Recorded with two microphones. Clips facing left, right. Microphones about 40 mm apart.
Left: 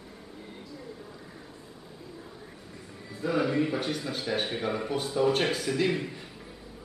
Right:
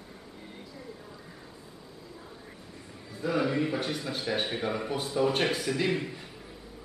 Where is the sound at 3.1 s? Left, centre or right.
Centre.